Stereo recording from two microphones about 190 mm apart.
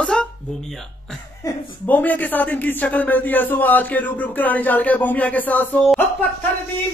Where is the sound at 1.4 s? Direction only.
20° left (ahead or behind).